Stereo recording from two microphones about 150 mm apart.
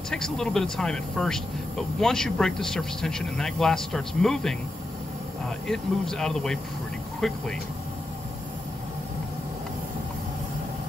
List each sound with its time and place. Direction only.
0.1 s speech: 5° left (ahead or behind)
5.7 s speech: 5° left (ahead or behind)